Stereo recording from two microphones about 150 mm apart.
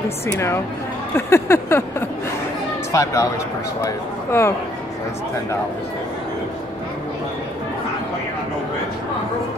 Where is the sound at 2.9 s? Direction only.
20° left (ahead or behind).